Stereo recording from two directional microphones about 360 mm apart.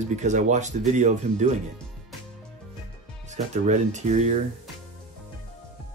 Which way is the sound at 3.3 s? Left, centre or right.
Centre.